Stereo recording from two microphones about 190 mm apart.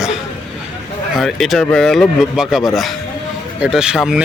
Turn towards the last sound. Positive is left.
turn(degrees=-5)  # may be behind; listen again after turning